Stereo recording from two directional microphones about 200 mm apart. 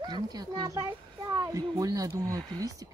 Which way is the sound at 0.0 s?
20° right (ahead or behind).